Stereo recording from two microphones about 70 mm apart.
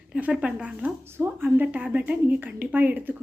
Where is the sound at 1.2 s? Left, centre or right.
Right.